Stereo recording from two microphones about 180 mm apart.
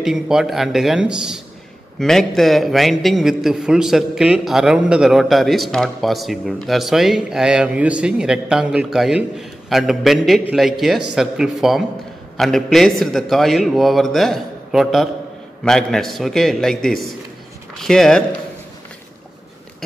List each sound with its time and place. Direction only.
0.0 s a man's voice: 5° right (ahead or behind)